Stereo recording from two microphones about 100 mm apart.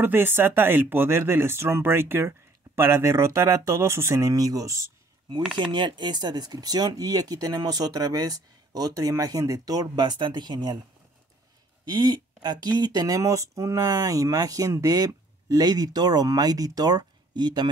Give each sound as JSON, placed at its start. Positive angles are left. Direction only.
{"t": 0.0, "sound": "speech", "side_deg": -20}
{"t": 5.6, "sound": "speech", "side_deg": -50}
{"t": 11.8, "sound": "speech", "side_deg": -45}